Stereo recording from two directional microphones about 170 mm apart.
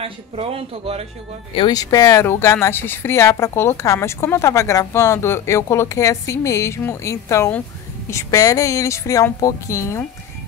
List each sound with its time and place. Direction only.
0.0 s speech: 35° right (ahead or behind)
1.5 s speech: 25° left (ahead or behind)